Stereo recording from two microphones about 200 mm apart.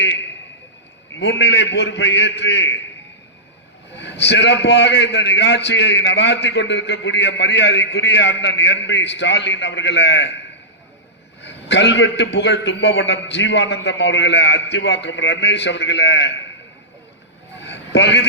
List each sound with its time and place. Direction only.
1.1 s a man's voice: 65° left (ahead or behind)
3.9 s a man's voice: 60° left (ahead or behind)
11.4 s a man's voice: 60° left (ahead or behind)
17.6 s a sound: 60° left (ahead or behind)